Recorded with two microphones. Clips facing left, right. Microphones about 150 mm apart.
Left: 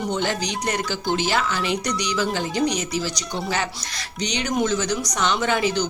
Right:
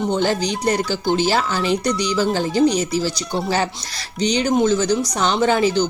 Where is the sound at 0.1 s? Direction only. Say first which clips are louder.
Right 5 dB; 30° right (ahead or behind).